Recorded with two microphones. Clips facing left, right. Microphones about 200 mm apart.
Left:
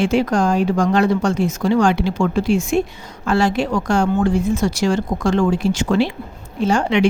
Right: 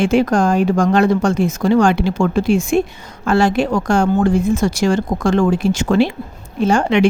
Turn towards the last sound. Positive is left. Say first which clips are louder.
# right 2 dB
turn(degrees=-50)  # may be behind; listen again after turning